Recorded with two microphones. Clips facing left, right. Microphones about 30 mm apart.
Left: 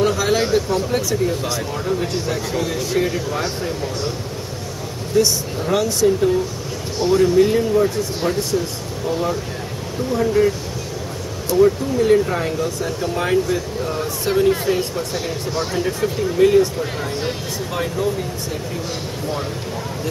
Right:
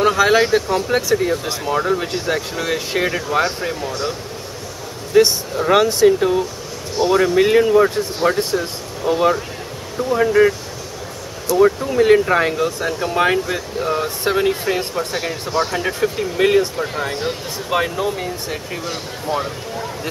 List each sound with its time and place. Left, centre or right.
0.0 s speech: right
5.1 s speech: right
11.6 s speech: right
17.6 s speech: right